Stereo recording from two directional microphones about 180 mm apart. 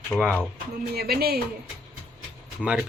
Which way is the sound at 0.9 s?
60° right (ahead or behind).